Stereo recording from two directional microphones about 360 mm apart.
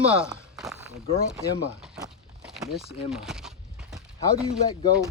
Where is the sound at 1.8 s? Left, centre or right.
Centre.